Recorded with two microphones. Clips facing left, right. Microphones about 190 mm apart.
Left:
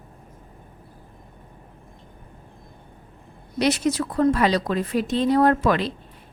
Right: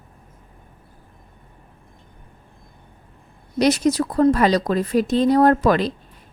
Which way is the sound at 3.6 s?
40° right (ahead or behind).